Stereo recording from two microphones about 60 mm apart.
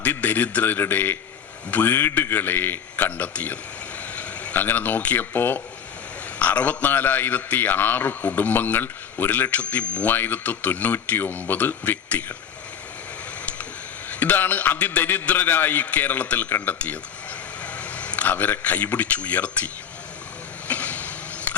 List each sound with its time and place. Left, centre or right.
0.0 s a man's voice: left
4.1 s vehicle: left
4.6 s a man's voice: left
14.1 s a man's voice: left
20.7 s a sound: left